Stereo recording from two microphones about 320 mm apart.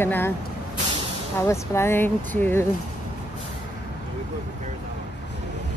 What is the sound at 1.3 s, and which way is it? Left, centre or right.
Speech, centre.